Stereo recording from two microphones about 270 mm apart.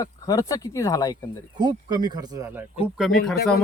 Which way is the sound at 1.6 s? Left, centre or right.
Centre.